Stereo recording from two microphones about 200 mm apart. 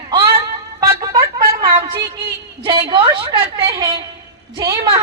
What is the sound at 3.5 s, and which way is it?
A woman's voice, 15° right (ahead or behind).